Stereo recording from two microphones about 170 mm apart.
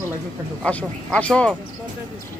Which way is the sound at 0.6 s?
5° left (ahead or behind).